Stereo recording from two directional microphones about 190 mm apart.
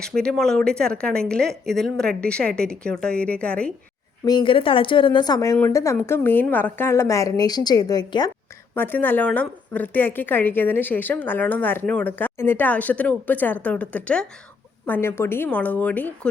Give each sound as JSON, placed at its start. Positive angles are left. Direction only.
{"t": 0.0, "sound": "speech", "side_deg": 5}
{"t": 4.3, "sound": "speech", "side_deg": 25}
{"t": 8.7, "sound": "a woman's voice", "side_deg": 10}